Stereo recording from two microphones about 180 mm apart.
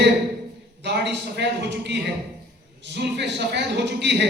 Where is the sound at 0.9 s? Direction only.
70° right (ahead or behind).